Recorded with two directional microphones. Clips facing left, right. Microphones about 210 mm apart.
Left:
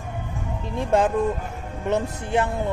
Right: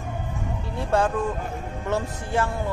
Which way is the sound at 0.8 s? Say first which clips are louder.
Left 3 dB; 20° left (ahead or behind).